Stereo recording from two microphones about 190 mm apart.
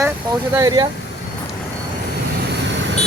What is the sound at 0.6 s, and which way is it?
Speech, 20° right (ahead or behind).